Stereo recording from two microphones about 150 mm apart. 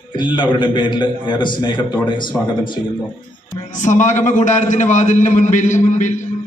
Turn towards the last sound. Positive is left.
turn(degrees=55)  # may be behind; listen again after turning